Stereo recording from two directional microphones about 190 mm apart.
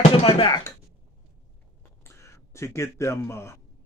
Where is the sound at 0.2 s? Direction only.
30° left (ahead or behind).